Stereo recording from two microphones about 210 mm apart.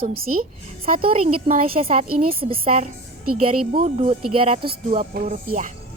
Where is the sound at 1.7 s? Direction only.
30° right (ahead or behind).